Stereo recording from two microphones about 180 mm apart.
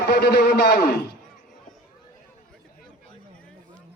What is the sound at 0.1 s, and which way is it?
Speech, 65° left (ahead or behind).